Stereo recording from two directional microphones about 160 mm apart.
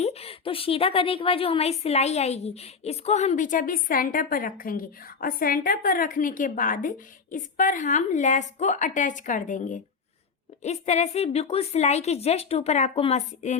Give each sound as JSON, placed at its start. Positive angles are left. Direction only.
{"t": 0.0, "sound": "a woman's voice", "side_deg": 40}